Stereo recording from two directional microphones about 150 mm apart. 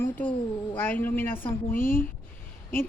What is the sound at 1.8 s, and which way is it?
Speech, 70° left (ahead or behind).